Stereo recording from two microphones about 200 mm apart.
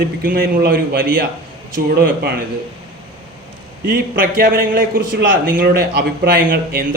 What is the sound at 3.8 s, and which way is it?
Speech, 45° right (ahead or behind).